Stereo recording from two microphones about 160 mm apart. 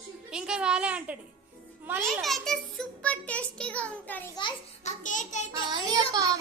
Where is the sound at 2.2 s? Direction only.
Centre (ahead or behind).